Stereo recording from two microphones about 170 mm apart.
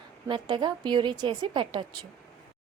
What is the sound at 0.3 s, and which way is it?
A woman's voice, 30° right (ahead or behind).